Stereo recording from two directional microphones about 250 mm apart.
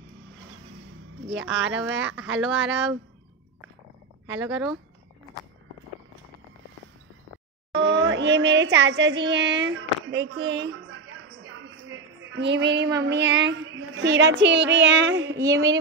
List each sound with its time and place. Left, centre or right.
1.3 s child singing: right
4.4 s speech: centre
7.7 s child singing: right
12.3 s child singing: right
15.4 s a woman's voice: centre